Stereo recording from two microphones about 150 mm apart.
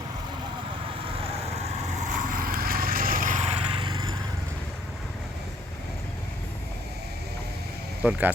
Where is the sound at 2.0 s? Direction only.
65° right (ahead or behind).